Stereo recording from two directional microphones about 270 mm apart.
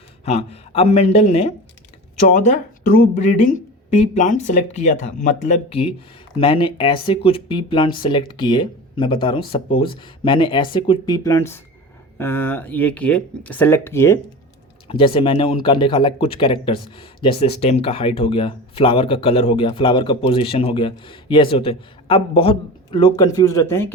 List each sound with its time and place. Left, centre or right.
0.3 s speech: left